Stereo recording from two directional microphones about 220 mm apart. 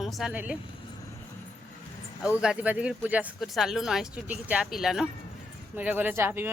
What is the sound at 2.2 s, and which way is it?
Speech, 5° right (ahead or behind).